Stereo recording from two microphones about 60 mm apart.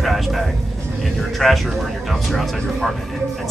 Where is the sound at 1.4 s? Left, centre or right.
Centre.